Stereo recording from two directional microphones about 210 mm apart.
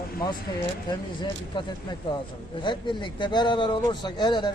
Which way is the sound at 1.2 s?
20° left (ahead or behind).